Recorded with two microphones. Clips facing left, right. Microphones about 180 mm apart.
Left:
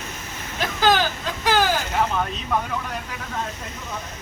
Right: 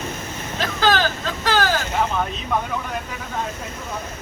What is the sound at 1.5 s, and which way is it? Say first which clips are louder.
Vehicle: even; 15° left (ahead or behind).